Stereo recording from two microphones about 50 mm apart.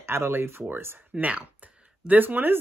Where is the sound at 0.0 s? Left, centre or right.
Right.